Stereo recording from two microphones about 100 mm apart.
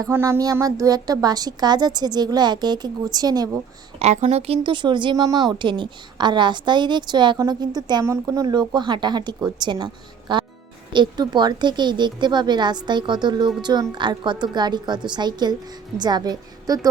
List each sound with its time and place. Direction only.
0.1 s speech: 30° right (ahead or behind)
4.0 s speech: 90° right; by 5.1 s 50° right (ahead or behind)
5.1 s a woman's voice: 40° right (ahead or behind)
8.0 s a woman's voice: 30° right (ahead or behind)